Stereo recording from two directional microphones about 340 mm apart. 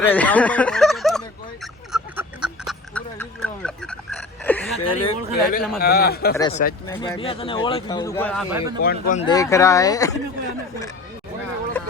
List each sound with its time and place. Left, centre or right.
0.0 s speech: centre
1.9 s duck: centre
4.8 s a man's voice: left
6.3 s speech: centre
8.8 s speech: left